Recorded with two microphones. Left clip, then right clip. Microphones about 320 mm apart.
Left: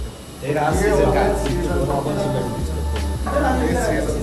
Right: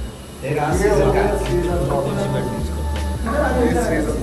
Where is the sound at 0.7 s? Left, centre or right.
Centre.